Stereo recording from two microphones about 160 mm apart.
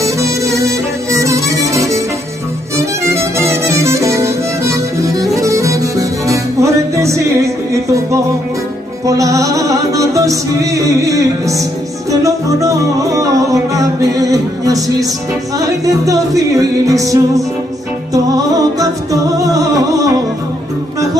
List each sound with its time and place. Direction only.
0.0 s music: 20° right (ahead or behind)